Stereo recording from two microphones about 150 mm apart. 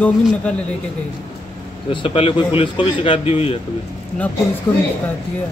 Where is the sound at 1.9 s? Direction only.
35° left (ahead or behind).